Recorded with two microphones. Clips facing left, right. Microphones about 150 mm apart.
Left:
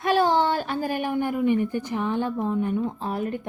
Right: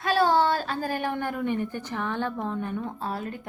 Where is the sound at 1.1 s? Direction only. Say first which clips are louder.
Left 6 dB; 10° left (ahead or behind).